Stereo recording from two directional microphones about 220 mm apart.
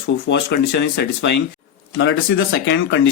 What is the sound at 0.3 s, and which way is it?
Speech, 50° left (ahead or behind).